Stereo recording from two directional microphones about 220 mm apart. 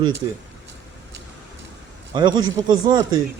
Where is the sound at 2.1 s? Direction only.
20° right (ahead or behind).